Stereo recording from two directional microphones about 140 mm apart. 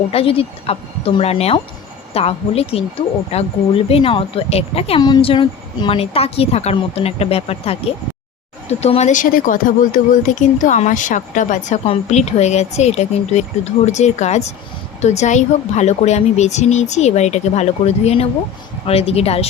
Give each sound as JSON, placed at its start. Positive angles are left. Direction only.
{"t": 0.1, "sound": "a woman's voice", "side_deg": 40}
{"t": 11.9, "sound": "a woman's voice", "side_deg": 50}